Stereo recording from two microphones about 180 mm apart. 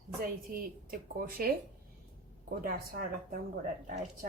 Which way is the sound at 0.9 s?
55° right (ahead or behind).